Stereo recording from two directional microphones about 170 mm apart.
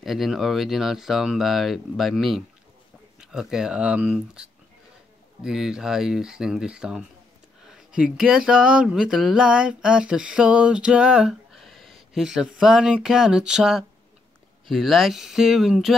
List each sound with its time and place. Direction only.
0.0 s speech: centre (ahead or behind)